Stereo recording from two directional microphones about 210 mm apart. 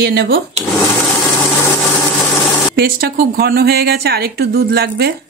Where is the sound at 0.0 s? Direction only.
55° right (ahead or behind).